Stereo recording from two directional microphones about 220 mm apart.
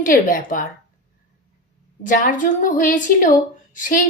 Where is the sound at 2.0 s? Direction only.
35° left (ahead or behind).